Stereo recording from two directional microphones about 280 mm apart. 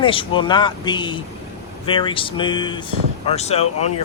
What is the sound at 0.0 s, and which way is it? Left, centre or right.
Speech, centre.